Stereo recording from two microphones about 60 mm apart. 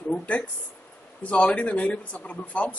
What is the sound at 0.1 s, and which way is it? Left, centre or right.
Speech, centre.